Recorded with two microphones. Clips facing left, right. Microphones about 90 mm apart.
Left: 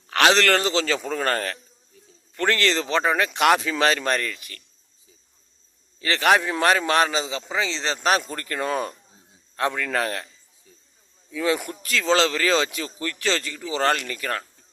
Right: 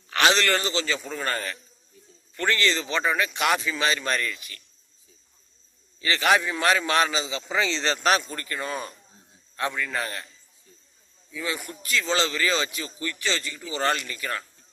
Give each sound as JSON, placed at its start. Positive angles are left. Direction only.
{"t": 0.1, "sound": "a man's voice", "side_deg": 65}
{"t": 2.6, "sound": "speech", "side_deg": 65}
{"t": 6.0, "sound": "a man's voice", "side_deg": 50}
{"t": 7.4, "sound": "speech", "side_deg": 10}
{"t": 7.8, "sound": "speech", "side_deg": 25}
{"t": 8.2, "sound": "speech", "side_deg": 55}
{"t": 9.6, "sound": "speech", "side_deg": 60}
{"t": 11.3, "sound": "speech", "side_deg": 65}
{"t": 11.8, "sound": "a man's voice", "side_deg": 80}
{"t": 13.8, "sound": "speech", "side_deg": 60}